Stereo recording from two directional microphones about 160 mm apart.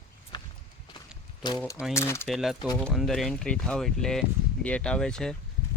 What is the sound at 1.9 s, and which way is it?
Speech, 15° left (ahead or behind).